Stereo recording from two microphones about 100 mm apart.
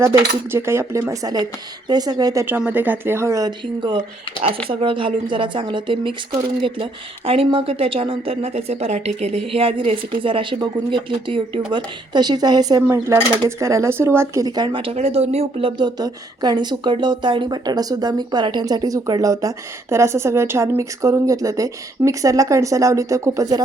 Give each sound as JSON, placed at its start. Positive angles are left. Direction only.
{"t": 0.0, "sound": "speech", "side_deg": -25}
{"t": 2.5, "sound": "speech", "side_deg": -15}
{"t": 3.8, "sound": "speech", "side_deg": -55}
{"t": 12.1, "sound": "speech", "side_deg": -45}
{"t": 12.9, "sound": "speech", "side_deg": -25}
{"t": 14.4, "sound": "speech", "side_deg": -45}
{"t": 15.8, "sound": "speech", "side_deg": -45}